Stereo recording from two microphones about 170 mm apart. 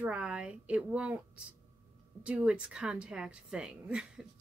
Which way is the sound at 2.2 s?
5° right (ahead or behind).